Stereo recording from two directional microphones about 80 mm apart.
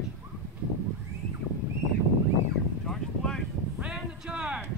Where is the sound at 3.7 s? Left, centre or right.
Centre.